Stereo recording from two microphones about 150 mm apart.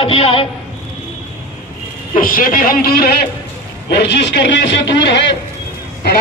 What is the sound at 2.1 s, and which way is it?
A man's voice, 70° left (ahead or behind).